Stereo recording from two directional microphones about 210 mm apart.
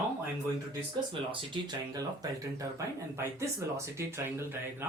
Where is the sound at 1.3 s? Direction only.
20° right (ahead or behind).